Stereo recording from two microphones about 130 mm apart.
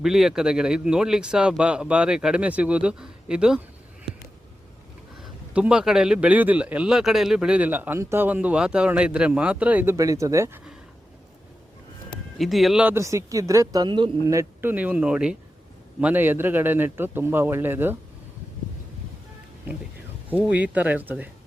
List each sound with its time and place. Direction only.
0.0 s speech: 5° right (ahead or behind)
5.5 s speech: 10° right (ahead or behind)
12.4 s speech: centre (ahead or behind)
12.8 s speech: 20° right (ahead or behind); by 14.1 s 35° right (ahead or behind)
14.3 s speech: 20° right (ahead or behind)
20.3 s speech: 10° right (ahead or behind)